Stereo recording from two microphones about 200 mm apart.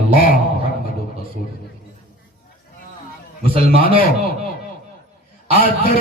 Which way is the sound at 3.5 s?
45° left (ahead or behind).